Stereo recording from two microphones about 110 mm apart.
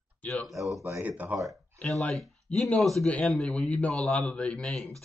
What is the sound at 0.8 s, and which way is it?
Speech, 15° right (ahead or behind).